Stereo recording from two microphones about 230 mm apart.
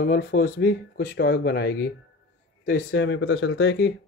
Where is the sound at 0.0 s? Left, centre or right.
Left.